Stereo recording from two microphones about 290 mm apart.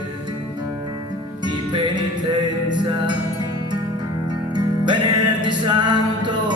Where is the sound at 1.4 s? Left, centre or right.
Centre.